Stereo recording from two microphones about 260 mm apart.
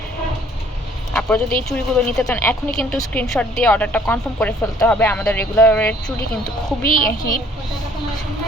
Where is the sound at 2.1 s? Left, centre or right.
Centre.